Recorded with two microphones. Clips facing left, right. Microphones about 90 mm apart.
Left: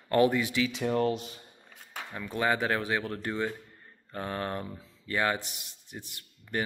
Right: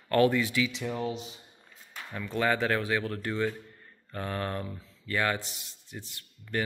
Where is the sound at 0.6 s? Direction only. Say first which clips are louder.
Left 3 dB; 50° left (ahead or behind).